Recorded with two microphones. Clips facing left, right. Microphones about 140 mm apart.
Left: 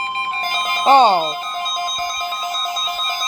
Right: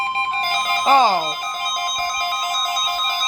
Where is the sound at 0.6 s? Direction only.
30° left (ahead or behind).